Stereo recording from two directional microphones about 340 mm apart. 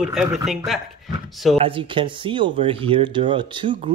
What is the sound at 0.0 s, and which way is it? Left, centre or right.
Speech, centre.